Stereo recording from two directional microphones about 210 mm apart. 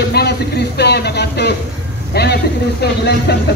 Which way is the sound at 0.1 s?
50° left (ahead or behind).